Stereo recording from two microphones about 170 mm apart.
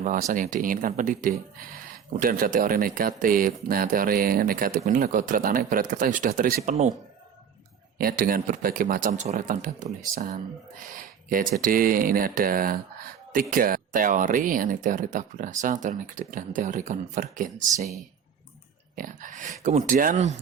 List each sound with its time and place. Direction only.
0.0 s speech: 45° right (ahead or behind)
7.9 s speech: 60° right (ahead or behind)
18.9 s speech: 50° right (ahead or behind)